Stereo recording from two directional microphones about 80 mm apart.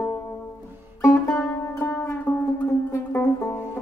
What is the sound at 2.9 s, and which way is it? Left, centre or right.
Music, left.